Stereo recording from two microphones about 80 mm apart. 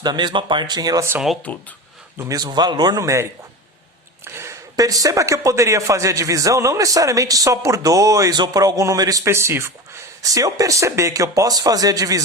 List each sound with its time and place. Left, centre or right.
0.0 s speech: right
1.5 s speech: centre
2.3 s speech: right
3.0 s speech: right
4.2 s a sound: right
4.8 s a man's voice: right
9.3 s speech: right
10.2 s a man's voice: right